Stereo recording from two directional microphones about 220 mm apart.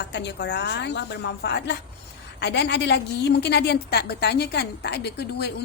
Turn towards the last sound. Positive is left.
turn(degrees=50)  # may be behind; listen again after turning